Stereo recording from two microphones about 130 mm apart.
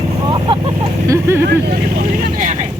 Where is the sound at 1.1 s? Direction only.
20° right (ahead or behind).